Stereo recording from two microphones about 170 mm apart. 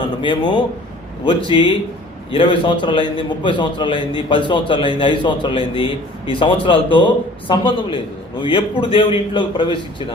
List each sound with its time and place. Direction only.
0.2 s a man's voice: 30° left (ahead or behind)